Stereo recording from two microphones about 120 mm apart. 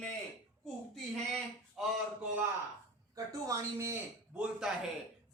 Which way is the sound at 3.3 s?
25° right (ahead or behind).